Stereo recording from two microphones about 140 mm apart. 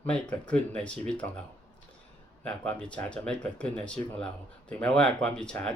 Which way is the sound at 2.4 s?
10° left (ahead or behind).